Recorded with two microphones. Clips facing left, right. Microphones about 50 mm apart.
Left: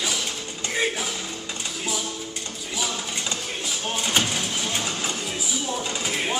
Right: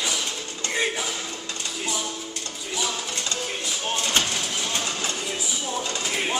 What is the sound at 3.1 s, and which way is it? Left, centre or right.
Music, centre.